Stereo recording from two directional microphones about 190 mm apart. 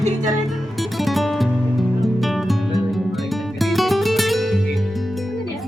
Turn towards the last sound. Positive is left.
turn(degrees=0)  # may be behind; listen again after turning